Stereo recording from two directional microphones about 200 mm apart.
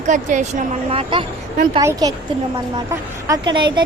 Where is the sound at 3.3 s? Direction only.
20° right (ahead or behind).